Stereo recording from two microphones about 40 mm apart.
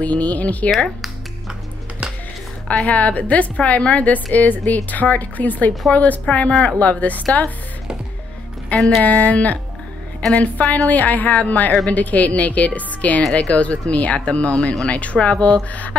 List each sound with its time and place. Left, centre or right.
0.0 s a woman's voice: left
2.8 s a woman's voice: left
8.7 s speech: centre
9.0 s a woman's voice: left